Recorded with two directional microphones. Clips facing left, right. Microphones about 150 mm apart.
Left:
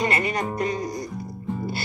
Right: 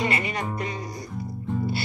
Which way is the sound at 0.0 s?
45° left (ahead or behind).